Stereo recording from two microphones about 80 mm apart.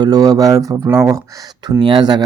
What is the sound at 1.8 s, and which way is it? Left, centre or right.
Speech, right.